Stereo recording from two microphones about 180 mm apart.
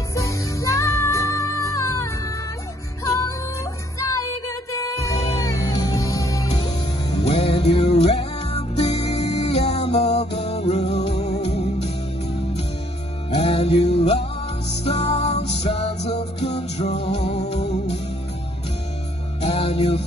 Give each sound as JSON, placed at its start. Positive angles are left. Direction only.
{"t": 0.1, "sound": "music", "side_deg": 15}
{"t": 3.1, "sound": "music", "side_deg": 20}
{"t": 4.7, "sound": "music", "side_deg": 15}
{"t": 6.5, "sound": "music", "side_deg": 30}
{"t": 13.4, "sound": "music", "side_deg": 35}
{"t": 19.4, "sound": "music", "side_deg": 35}